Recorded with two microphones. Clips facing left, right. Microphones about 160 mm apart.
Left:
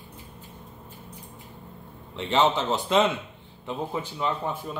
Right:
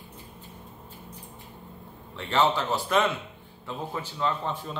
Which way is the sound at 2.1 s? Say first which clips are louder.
Left 2 dB; 20° left (ahead or behind).